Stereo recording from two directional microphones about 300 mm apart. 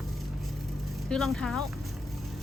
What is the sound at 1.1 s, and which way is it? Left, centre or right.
Speech, centre.